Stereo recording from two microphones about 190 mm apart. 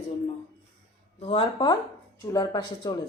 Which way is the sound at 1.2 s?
30° left (ahead or behind).